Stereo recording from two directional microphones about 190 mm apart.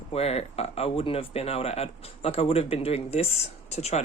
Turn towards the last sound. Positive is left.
turn(degrees=35)  # may be behind; listen again after turning